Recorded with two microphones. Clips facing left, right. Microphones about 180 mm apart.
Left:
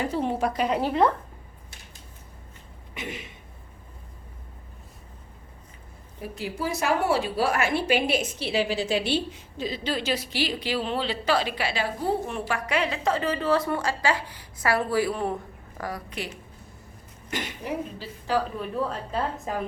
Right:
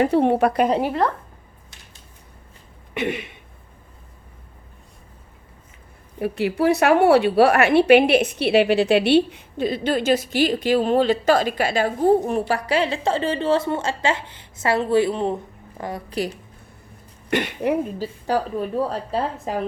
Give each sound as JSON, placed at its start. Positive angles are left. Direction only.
{"t": 0.0, "sound": "a woman's voice", "side_deg": -65}
{"t": 2.9, "sound": "a sound", "side_deg": -65}
{"t": 6.1, "sound": "a woman's voice", "side_deg": -65}
{"t": 16.1, "sound": "a woman's voice", "side_deg": -35}
{"t": 17.2, "sound": "a woman's voice", "side_deg": -65}
{"t": 18.0, "sound": "a woman's voice", "side_deg": -40}